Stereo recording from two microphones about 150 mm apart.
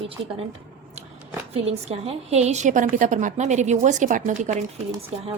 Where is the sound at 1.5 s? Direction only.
45° right (ahead or behind).